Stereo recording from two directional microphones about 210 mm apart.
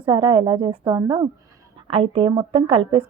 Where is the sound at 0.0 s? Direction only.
20° right (ahead or behind).